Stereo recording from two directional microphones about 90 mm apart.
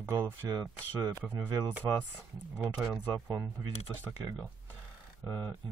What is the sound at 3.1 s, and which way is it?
Speech, 40° right (ahead or behind).